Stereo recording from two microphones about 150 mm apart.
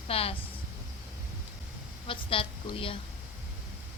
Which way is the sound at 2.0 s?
35° left (ahead or behind).